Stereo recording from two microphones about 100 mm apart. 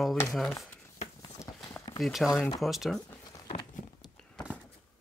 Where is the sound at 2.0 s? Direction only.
Centre (ahead or behind).